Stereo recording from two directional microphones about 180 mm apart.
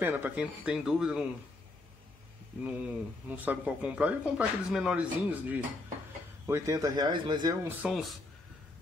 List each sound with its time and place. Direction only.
0.0 s speech: 10° right (ahead or behind)
2.6 s speech: 10° right (ahead or behind); by 7.5 s 25° right (ahead or behind)
7.9 s speech: centre (ahead or behind)